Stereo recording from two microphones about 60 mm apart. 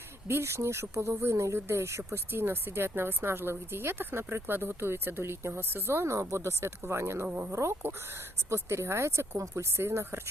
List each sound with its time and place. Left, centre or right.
0.3 s speech: right
2.1 s a woman's voice: right